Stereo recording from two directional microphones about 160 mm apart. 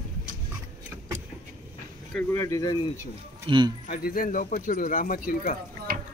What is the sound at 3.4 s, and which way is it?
Speech, 30° right (ahead or behind).